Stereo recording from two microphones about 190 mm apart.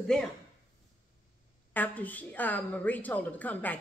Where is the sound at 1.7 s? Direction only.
10° left (ahead or behind).